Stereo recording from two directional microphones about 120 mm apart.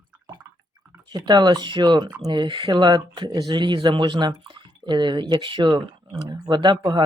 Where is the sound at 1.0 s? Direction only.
35° right (ahead or behind).